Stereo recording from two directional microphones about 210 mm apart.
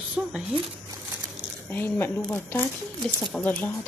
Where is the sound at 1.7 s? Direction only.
10° left (ahead or behind).